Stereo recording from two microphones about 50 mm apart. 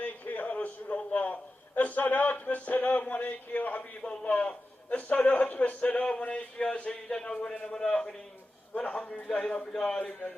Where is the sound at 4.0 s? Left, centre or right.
Left.